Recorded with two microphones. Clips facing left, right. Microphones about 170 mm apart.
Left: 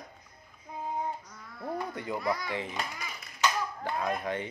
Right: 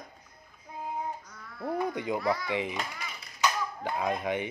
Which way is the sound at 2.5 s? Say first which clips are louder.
Right 3 dB; 15° right (ahead or behind).